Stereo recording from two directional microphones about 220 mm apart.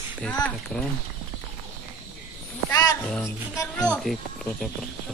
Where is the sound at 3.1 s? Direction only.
10° left (ahead or behind).